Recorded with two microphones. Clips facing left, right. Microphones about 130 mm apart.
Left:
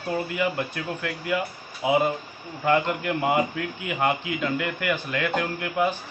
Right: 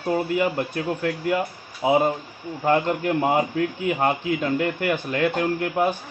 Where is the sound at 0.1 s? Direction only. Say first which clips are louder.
Right 4 dB; 40° right (ahead or behind).